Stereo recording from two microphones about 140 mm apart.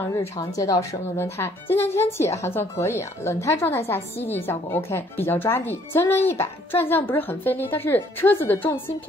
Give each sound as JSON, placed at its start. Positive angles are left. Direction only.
{"t": 0.1, "sound": "a woman's voice", "side_deg": 25}